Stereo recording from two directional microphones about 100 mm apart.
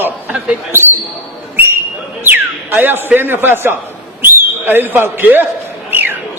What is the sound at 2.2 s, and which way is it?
Speech, 20° right (ahead or behind).